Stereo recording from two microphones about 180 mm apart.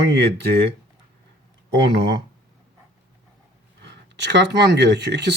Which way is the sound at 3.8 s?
70° right (ahead or behind).